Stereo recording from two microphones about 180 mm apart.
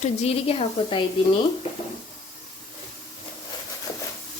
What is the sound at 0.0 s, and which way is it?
A woman's voice, 35° left (ahead or behind).